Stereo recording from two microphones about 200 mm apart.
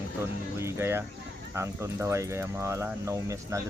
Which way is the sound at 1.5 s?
15° right (ahead or behind).